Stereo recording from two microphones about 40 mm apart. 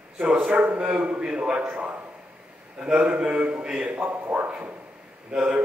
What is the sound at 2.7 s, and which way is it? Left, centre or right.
A man's voice, right.